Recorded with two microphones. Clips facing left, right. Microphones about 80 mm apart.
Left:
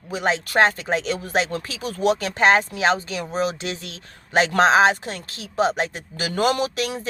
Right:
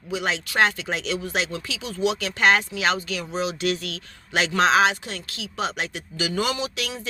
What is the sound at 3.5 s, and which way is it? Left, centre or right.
Speech, left.